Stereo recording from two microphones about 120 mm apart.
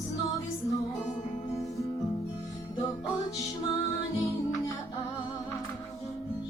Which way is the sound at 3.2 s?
30° left (ahead or behind).